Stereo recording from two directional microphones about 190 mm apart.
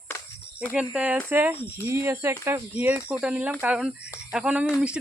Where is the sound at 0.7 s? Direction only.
5° right (ahead or behind).